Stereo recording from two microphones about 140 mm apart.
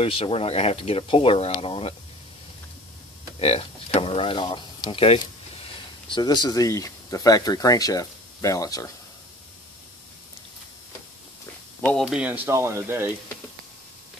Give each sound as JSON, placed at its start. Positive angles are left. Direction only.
{"t": 0.0, "sound": "speech", "side_deg": 45}
{"t": 3.3, "sound": "speech", "side_deg": 45}
{"t": 12.0, "sound": "speech", "side_deg": -5}
{"t": 12.4, "sound": "speech", "side_deg": -20}